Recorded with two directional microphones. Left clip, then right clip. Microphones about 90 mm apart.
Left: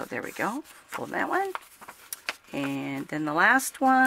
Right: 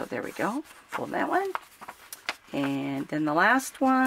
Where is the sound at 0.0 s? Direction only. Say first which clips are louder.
Right 1 dB; 40° left (ahead or behind).